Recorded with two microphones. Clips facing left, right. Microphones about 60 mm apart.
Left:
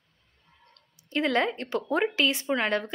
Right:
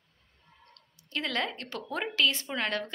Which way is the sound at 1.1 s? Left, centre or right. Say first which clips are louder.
Left 7 dB; left.